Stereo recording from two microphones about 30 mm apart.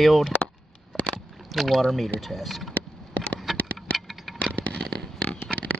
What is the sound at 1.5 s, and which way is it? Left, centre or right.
Speech, centre.